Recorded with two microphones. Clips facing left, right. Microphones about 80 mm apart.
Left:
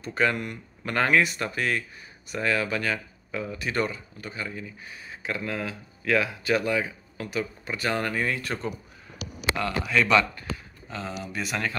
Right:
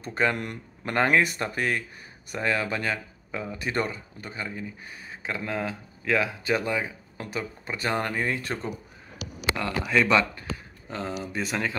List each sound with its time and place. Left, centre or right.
0.0 s speech: right
5.2 s speech: right
9.6 s speech: right